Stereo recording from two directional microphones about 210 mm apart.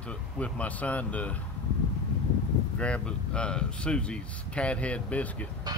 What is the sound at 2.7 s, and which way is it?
Speech, 5° left (ahead or behind).